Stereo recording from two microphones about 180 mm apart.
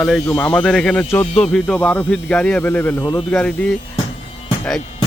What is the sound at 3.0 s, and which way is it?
Speech, 25° left (ahead or behind).